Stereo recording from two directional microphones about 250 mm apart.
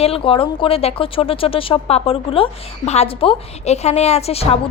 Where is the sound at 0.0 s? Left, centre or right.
Left.